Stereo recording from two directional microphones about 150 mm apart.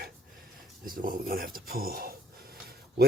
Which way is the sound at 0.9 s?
70° right (ahead or behind).